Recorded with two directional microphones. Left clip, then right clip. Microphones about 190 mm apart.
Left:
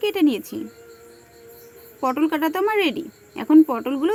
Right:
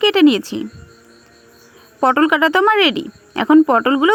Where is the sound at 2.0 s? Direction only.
35° right (ahead or behind).